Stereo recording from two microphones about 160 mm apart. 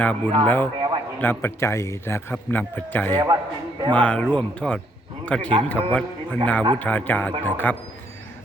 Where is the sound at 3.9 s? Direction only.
10° left (ahead or behind).